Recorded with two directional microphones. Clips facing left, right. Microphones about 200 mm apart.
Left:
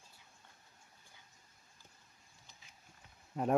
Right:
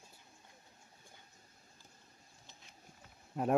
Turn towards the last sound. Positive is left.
turn(degrees=-5)  # may be behind; listen again after turning